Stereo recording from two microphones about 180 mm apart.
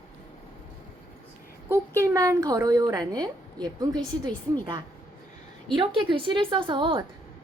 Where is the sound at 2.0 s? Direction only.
20° right (ahead or behind).